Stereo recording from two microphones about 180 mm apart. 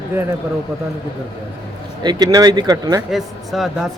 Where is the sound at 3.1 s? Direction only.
Centre (ahead or behind).